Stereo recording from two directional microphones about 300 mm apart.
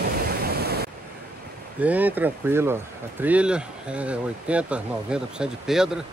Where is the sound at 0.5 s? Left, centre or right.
Right.